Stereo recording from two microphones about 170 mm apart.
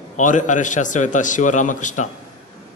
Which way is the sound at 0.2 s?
50° left (ahead or behind).